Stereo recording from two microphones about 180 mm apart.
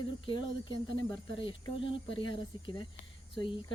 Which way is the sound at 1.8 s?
25° left (ahead or behind).